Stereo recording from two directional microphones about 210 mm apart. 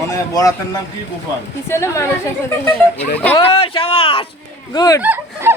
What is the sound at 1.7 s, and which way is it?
Speech, 15° left (ahead or behind).